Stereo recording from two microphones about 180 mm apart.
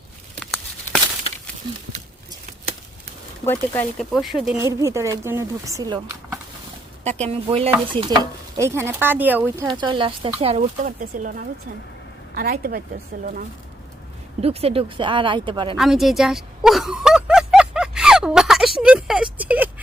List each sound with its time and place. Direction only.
3.4 s speech: 10° left (ahead or behind)
4.1 s speech: centre (ahead or behind)
4.5 s speech: 15° right (ahead or behind)
7.0 s speech: 40° right (ahead or behind); by 9.6 s 10° right (ahead or behind)
9.6 s speech: 25° right (ahead or behind)
10.6 s a woman's voice: 50° right (ahead or behind)
14.4 s speech: 35° right (ahead or behind)
15.8 s speech: centre (ahead or behind)